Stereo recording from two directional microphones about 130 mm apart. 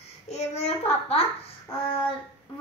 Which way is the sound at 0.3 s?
55° left (ahead or behind).